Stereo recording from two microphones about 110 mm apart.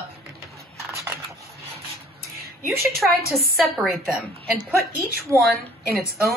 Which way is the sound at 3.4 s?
Centre (ahead or behind).